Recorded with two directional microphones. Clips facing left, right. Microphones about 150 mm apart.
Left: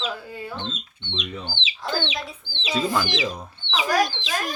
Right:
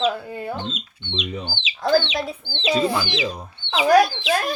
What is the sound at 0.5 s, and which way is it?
Speech, 10° right (ahead or behind).